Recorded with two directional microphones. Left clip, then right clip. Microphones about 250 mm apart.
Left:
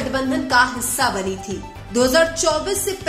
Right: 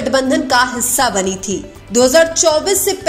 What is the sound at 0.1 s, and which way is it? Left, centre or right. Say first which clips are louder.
Speech: right 5 dB; right.